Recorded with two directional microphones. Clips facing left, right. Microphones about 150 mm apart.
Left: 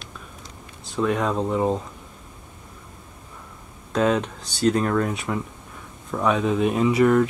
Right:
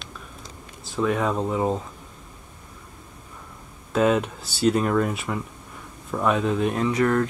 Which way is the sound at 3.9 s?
5° right (ahead or behind).